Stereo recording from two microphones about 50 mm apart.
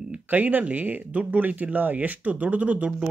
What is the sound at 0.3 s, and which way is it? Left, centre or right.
Speech, right.